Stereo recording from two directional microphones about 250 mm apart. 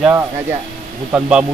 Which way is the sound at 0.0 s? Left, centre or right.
Centre.